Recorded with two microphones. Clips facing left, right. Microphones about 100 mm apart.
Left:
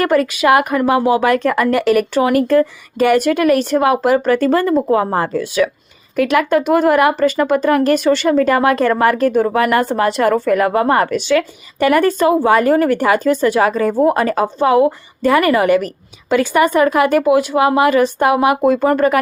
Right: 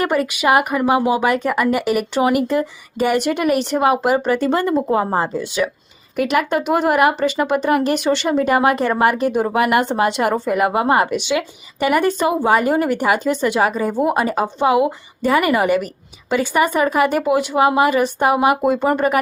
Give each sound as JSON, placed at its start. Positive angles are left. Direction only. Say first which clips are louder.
{"t": 0.0, "sound": "speech", "louder": "left 4 dB", "side_deg": -10}
{"t": 6.9, "sound": "speech", "louder": "left 3 dB", "side_deg": -5}
{"t": 8.1, "sound": "speech", "louder": "left 4 dB", "side_deg": -25}
{"t": 8.4, "sound": "a woman's voice", "louder": "left 3 dB", "side_deg": -10}
{"t": 18.7, "sound": "speech", "louder": "left 3 dB", "side_deg": -20}